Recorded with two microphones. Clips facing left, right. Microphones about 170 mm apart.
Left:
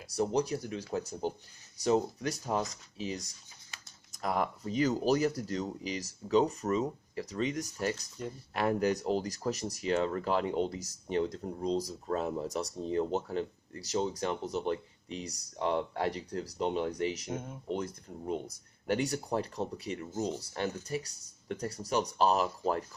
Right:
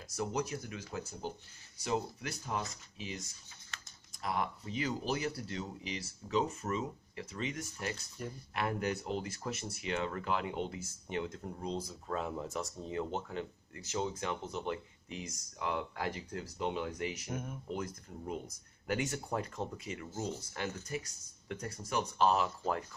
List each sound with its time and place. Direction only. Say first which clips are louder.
0.1 s speech: left 6 dB; 35° left (ahead or behind)
18.9 s speech: left 4 dB; 35° left (ahead or behind)